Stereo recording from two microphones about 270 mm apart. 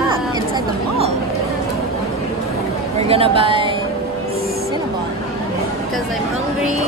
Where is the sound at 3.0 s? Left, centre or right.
Right.